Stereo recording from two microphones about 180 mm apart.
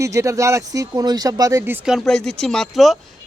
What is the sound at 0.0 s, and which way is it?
Speech, 15° right (ahead or behind).